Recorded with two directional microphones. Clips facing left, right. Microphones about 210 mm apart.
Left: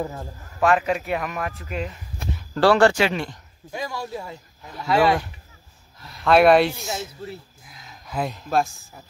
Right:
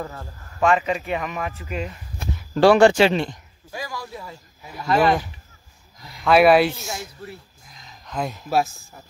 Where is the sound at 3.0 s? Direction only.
30° right (ahead or behind).